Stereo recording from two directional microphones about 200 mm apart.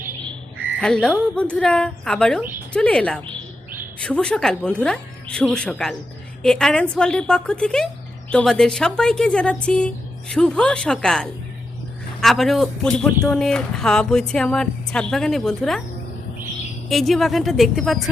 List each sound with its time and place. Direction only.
0.8 s speech: 5° left (ahead or behind)
16.9 s speech: centre (ahead or behind)